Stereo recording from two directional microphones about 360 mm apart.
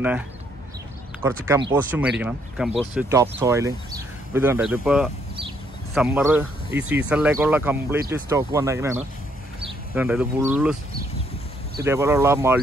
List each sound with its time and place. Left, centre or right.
1.2 s speech: centre
11.8 s speech: centre